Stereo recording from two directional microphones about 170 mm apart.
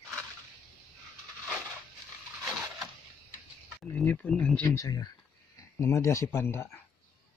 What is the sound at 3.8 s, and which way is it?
Speech, 10° left (ahead or behind).